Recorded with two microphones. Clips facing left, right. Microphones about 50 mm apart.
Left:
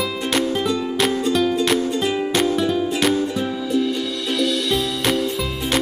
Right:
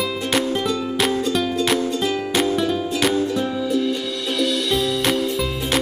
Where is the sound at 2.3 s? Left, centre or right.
Centre.